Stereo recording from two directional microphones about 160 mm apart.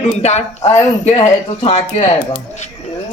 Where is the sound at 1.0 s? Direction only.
40° left (ahead or behind).